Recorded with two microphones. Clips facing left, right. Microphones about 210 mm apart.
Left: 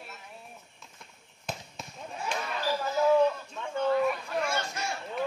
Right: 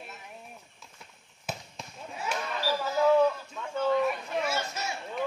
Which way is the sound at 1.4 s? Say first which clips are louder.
Even; 5° right (ahead or behind).